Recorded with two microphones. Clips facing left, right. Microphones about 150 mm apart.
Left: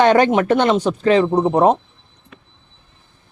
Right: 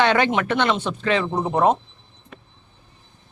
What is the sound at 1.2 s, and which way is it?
Speech, 25° left (ahead or behind).